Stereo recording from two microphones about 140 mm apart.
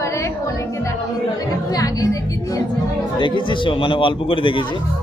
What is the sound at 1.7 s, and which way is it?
Speech, 25° left (ahead or behind).